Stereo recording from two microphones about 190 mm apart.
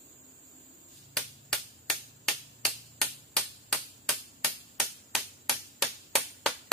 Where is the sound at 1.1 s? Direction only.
Centre (ahead or behind).